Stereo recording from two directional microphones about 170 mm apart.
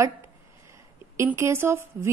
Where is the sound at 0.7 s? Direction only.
15° right (ahead or behind).